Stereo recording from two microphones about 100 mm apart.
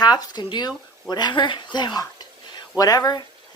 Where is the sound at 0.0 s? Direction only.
45° left (ahead or behind).